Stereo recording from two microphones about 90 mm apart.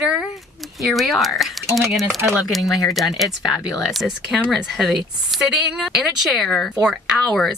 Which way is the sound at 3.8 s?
5° right (ahead or behind).